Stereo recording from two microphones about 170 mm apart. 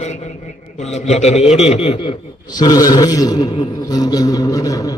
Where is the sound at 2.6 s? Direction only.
25° left (ahead or behind).